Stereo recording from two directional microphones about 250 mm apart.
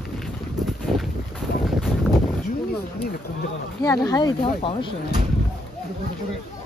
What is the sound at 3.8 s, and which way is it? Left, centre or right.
Speech, centre.